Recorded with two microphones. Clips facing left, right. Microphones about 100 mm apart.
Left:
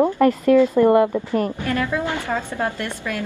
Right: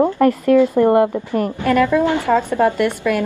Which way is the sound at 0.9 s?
30° right (ahead or behind).